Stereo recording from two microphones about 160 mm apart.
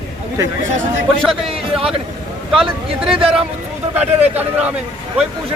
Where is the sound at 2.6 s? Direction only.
Centre (ahead or behind).